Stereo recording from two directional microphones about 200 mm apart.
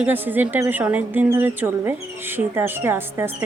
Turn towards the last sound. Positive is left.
turn(degrees=-10)  # may be behind; listen again after turning